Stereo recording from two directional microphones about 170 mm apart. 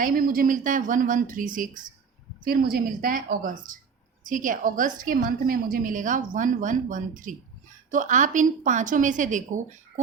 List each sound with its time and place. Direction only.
0.0 s a woman's voice: 55° right (ahead or behind)